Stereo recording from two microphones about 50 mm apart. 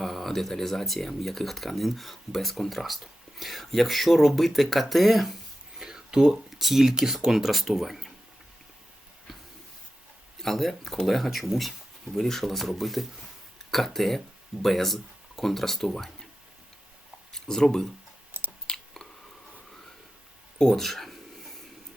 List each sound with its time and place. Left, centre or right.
0.0 s speech: centre
5.8 s a sound: centre
6.5 s speech: centre
10.4 s speech: centre
17.3 s speech: centre
18.3 s chewing: right
20.6 s a sound: centre